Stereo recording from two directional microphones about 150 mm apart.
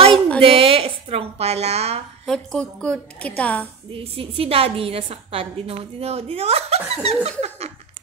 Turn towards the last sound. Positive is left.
turn(degrees=-45)  # may be behind; listen again after turning